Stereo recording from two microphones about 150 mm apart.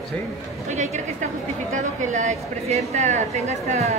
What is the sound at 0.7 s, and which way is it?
A woman's voice, 50° right (ahead or behind).